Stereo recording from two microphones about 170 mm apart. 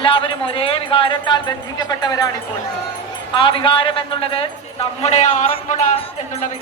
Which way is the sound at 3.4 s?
30° left (ahead or behind).